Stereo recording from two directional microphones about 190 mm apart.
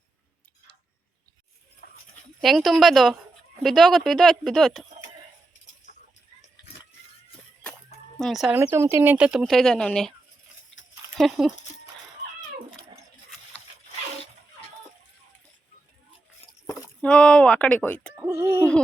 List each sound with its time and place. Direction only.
1.8 s a sound: 55° left (ahead or behind)
2.4 s speech: centre (ahead or behind)
8.2 s speech: centre (ahead or behind)
8.5 s speech: 15° right (ahead or behind)
17.0 s speech: 5° left (ahead or behind)
18.1 s speech: 10° right (ahead or behind)